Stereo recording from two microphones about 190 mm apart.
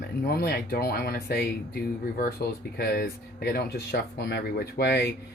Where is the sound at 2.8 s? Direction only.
55° left (ahead or behind).